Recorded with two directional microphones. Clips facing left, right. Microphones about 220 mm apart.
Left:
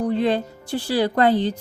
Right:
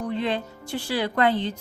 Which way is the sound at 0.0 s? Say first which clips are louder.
Left 6 dB; 35° left (ahead or behind).